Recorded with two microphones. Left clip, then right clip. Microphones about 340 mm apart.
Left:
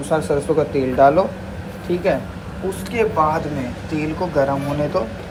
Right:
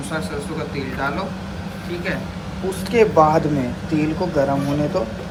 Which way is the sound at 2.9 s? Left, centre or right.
Centre.